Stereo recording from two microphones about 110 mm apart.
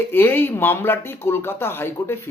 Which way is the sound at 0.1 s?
20° left (ahead or behind).